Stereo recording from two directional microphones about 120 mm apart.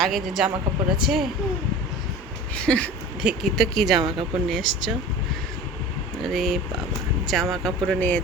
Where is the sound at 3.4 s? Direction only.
Centre (ahead or behind).